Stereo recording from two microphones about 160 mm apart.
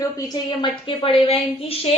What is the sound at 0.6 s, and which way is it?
A woman's voice, 35° left (ahead or behind).